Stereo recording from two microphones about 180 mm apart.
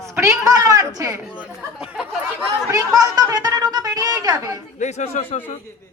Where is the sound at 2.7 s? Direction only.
20° right (ahead or behind).